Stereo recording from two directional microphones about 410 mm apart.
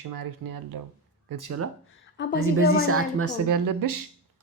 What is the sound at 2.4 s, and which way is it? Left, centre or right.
Speech, right.